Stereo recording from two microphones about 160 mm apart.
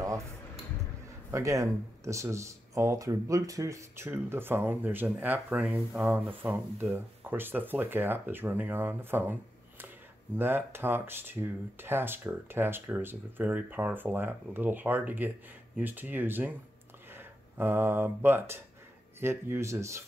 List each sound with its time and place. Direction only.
1.3 s speech: 20° right (ahead or behind)